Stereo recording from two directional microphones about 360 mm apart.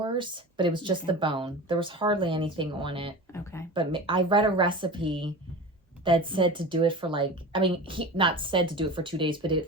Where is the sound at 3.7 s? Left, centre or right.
Centre.